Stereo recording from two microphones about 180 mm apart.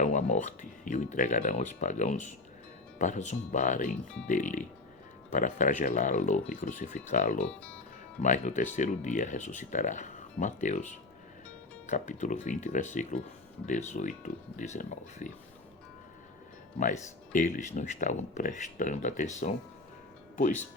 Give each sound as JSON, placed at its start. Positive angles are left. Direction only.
{"t": 0.0, "sound": "speech", "side_deg": 40}
{"t": 7.4, "sound": "speech", "side_deg": 5}
{"t": 8.2, "sound": "speech", "side_deg": 45}
{"t": 17.6, "sound": "speech", "side_deg": 40}